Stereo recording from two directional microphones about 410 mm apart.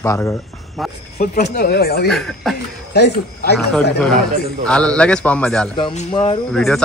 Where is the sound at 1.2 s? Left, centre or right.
Left.